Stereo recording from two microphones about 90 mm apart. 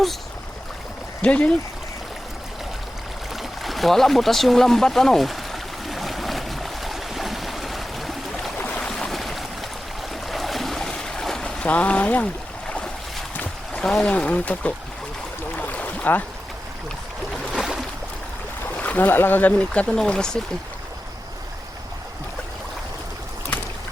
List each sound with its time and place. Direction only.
1.2 s speech: 15° left (ahead or behind)
3.6 s a sound: centre (ahead or behind); by 12.3 s 15° left (ahead or behind)
13.3 s boat: 15° left (ahead or behind)
13.8 s speech: 10° left (ahead or behind)
15.5 s boat: 15° left (ahead or behind)
17.5 s boat: 5° right (ahead or behind)
18.8 s speech: 20° left (ahead or behind)